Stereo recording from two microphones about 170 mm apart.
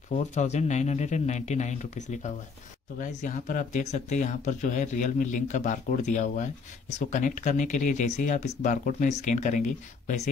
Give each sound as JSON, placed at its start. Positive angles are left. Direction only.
{"t": 0.1, "sound": "speech", "side_deg": 45}